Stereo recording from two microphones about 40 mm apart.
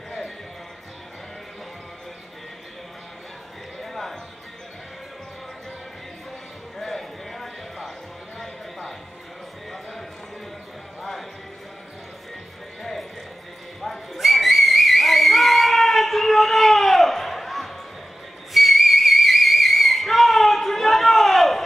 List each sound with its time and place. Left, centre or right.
3.8 s horse: centre
6.8 s a sound: centre
11.0 s basketball bounce: centre
13.7 s whistle: centre